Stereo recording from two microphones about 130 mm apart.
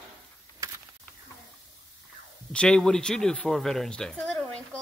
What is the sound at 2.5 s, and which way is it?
Speech, 5° left (ahead or behind).